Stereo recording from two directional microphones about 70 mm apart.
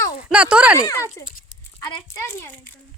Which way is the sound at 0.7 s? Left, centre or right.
Left.